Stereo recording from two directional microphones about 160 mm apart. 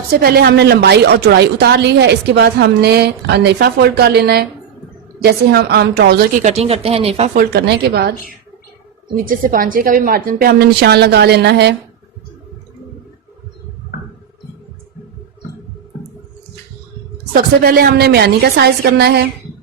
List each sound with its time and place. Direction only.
0.1 s a woman's voice: 70° right (ahead or behind)
6.4 s speech: 40° right (ahead or behind)
7.3 s a woman's voice: 85° right
9.1 s a woman's voice: 60° right (ahead or behind); by 11.8 s 90° right
17.3 s a woman's voice: 65° right (ahead or behind); by 19.3 s 80° right